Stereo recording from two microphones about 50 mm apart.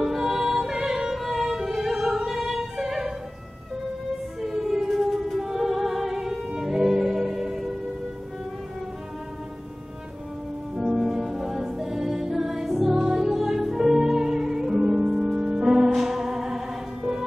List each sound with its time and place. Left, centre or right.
0.0 s music: centre
4.4 s music: centre
10.8 s music: centre